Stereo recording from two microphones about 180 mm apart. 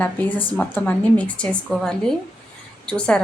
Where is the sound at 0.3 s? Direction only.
30° left (ahead or behind).